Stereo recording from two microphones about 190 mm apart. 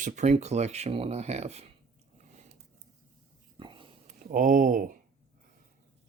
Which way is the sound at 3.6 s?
25° right (ahead or behind).